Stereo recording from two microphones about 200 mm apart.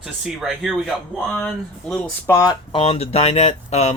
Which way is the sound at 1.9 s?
15° left (ahead or behind).